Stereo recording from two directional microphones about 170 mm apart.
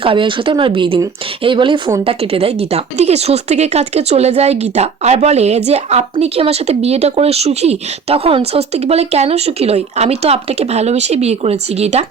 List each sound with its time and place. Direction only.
0.0 s speech: 30° right (ahead or behind)